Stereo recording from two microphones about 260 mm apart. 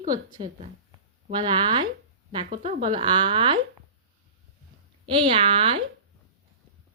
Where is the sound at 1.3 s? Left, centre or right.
Centre.